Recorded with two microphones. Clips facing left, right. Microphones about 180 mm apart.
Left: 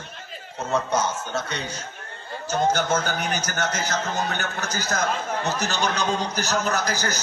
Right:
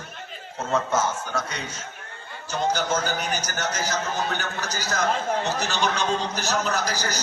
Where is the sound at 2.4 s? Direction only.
45° left (ahead or behind).